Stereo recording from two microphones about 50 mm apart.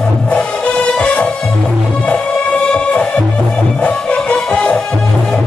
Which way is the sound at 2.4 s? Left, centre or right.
Left.